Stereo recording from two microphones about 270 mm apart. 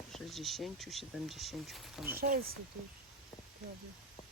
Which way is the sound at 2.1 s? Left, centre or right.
Right.